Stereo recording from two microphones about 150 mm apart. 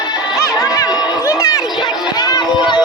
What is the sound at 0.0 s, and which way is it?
Music, 25° left (ahead or behind).